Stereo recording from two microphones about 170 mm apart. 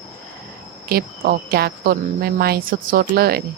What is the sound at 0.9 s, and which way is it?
A woman's voice, 60° right (ahead or behind).